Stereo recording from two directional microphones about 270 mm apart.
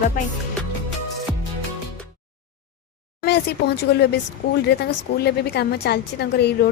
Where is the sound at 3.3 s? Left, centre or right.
Left.